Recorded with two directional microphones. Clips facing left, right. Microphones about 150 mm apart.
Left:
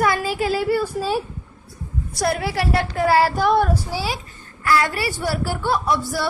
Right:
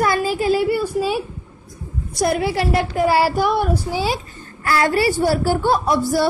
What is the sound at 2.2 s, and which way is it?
A woman's voice, 20° right (ahead or behind).